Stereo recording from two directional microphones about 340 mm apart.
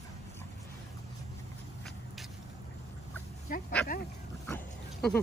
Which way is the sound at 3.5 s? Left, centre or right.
Left.